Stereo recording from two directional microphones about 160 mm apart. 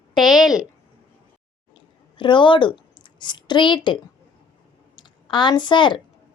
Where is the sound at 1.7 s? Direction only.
30° left (ahead or behind).